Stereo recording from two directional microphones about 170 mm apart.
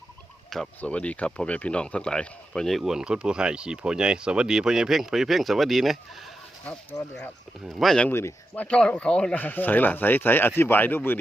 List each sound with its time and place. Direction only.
0.5 s speech: 5° left (ahead or behind)
6.9 s speech: 20° left (ahead or behind)
7.6 s speech: centre (ahead or behind)